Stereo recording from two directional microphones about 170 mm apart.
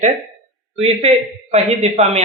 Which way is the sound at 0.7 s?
35° right (ahead or behind).